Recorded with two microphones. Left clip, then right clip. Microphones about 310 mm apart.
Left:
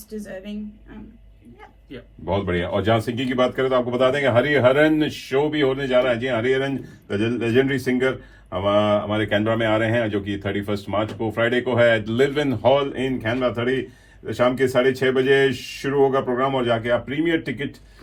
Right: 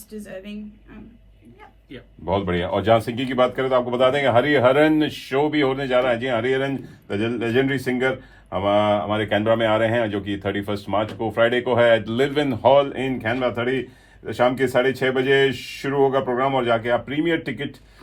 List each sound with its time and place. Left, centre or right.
0.1 s a woman's voice: centre
2.2 s a man's voice: right